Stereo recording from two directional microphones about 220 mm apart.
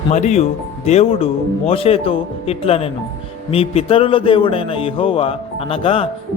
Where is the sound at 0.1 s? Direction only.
30° left (ahead or behind).